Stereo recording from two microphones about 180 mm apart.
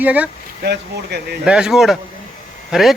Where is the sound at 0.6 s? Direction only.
65° right (ahead or behind).